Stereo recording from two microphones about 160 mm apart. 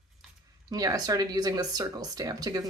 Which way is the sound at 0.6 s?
25° right (ahead or behind).